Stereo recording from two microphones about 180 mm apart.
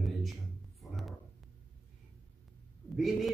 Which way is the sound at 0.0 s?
Centre (ahead or behind).